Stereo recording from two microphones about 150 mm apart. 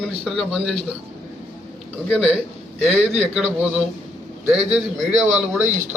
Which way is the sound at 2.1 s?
Centre (ahead or behind).